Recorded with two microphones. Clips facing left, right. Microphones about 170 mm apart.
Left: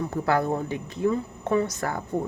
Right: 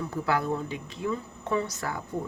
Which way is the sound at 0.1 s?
50° left (ahead or behind).